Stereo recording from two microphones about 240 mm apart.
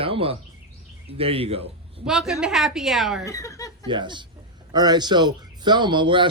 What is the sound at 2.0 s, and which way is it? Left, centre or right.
A woman's voice, centre.